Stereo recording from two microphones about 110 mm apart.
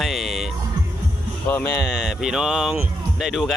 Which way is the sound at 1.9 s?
5° right (ahead or behind).